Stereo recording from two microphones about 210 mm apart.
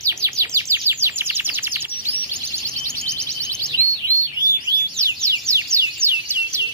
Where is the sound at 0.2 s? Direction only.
15° right (ahead or behind).